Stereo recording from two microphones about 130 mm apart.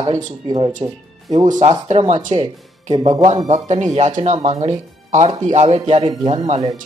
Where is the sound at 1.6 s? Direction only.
60° right (ahead or behind).